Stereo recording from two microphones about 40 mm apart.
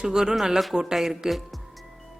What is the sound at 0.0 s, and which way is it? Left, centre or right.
Speech, centre.